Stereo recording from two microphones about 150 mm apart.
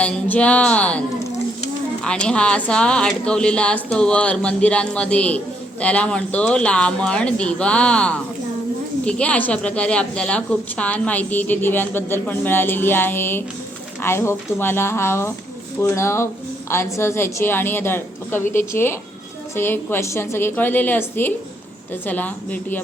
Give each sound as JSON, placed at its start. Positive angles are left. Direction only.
{"t": 0.0, "sound": "a woman's voice", "side_deg": 10}